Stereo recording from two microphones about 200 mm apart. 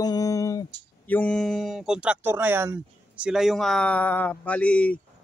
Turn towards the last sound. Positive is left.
turn(degrees=5)  # may be behind; listen again after turning